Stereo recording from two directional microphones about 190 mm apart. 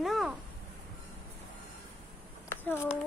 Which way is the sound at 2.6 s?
10° left (ahead or behind).